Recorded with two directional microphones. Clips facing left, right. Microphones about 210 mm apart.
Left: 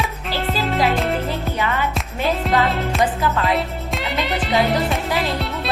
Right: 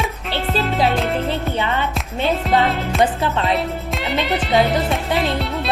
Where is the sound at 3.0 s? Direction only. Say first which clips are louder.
Right 2 dB; 25° right (ahead or behind).